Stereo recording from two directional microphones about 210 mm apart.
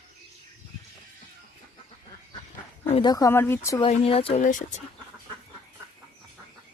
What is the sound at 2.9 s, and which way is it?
Speech, 20° left (ahead or behind).